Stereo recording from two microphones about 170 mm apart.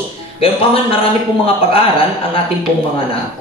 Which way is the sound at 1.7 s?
35° left (ahead or behind).